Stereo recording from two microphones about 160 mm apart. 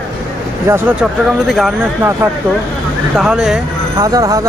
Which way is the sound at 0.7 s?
15° right (ahead or behind).